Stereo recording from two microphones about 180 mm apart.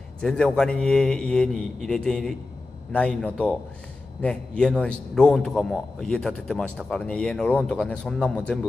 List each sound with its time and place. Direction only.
0.2 s a man's voice: 5° left (ahead or behind)